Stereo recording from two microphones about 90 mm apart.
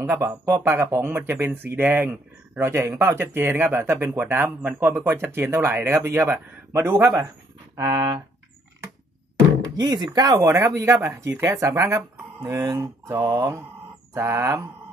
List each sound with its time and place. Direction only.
0.0 s speech: 30° right (ahead or behind)
7.8 s speech: 60° right (ahead or behind)
9.8 s speech: 50° right (ahead or behind)
10.4 s speech: 35° right (ahead or behind)